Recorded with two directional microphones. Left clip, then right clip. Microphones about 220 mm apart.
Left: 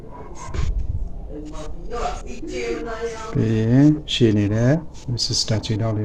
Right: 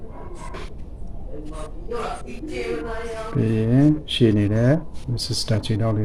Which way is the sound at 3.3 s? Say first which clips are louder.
Left 2 dB; 5° left (ahead or behind).